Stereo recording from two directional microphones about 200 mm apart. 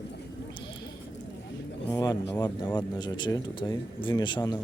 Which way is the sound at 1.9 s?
20° left (ahead or behind).